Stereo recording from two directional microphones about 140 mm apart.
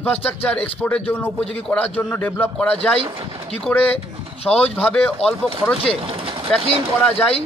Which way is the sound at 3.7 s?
10° left (ahead or behind).